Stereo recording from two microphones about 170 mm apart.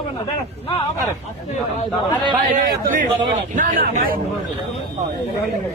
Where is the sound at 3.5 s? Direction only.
50° right (ahead or behind).